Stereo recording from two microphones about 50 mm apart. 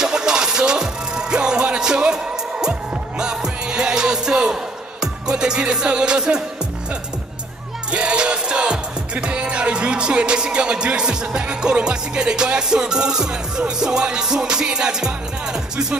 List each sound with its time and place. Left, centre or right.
0.0 s music: centre
3.2 s music: centre
7.9 s music: right